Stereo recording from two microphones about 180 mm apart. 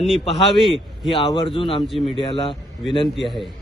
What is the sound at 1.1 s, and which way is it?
Speech, 30° left (ahead or behind).